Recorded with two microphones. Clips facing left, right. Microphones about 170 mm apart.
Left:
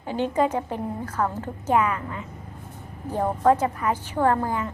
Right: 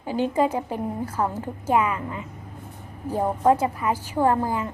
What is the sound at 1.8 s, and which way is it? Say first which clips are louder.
A woman's voice: even; 20° right (ahead or behind).